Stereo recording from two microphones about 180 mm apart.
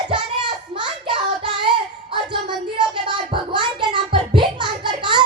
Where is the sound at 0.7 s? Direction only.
25° right (ahead or behind).